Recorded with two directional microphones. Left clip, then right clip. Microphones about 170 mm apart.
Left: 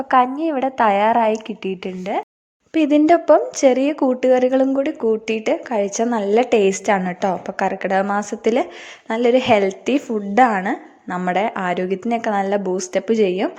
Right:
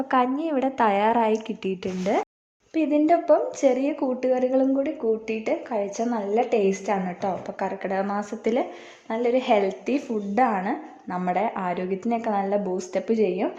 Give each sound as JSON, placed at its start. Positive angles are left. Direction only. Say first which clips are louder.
{"t": 0.1, "sound": "a woman's voice", "louder": "left 7 dB", "side_deg": 20}
{"t": 2.7, "sound": "a woman's voice", "louder": "left 6 dB", "side_deg": 30}